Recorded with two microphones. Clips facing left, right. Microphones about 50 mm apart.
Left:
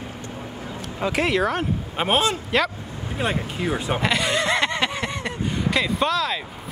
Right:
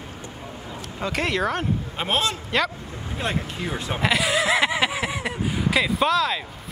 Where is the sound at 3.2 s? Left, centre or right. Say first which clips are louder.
Left 2 dB; centre.